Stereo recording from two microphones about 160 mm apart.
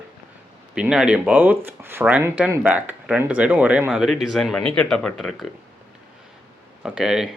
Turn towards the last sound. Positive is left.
turn(degrees=-5)  # may be behind; listen again after turning